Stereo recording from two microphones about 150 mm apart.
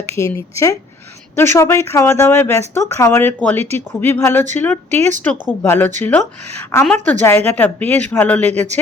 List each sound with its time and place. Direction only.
0.3 s speech: 20° left (ahead or behind)